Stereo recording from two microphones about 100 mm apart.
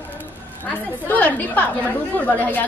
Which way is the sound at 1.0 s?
15° left (ahead or behind).